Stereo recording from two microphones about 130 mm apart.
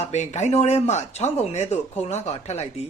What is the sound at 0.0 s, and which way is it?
Speech, 60° left (ahead or behind).